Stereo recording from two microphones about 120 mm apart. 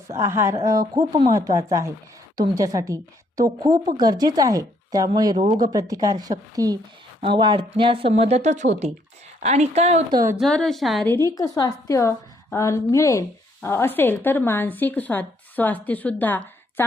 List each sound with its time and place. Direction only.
0.1 s a woman's voice: 25° right (ahead or behind)
7.2 s a woman's voice: 45° right (ahead or behind); by 8.9 s 80° right
9.4 s a woman's voice: 65° right (ahead or behind)
10.3 s a woman's voice: 5° left (ahead or behind)
11.0 s a woman's voice: 20° left (ahead or behind)